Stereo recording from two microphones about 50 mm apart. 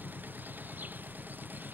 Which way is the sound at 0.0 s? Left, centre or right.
Right.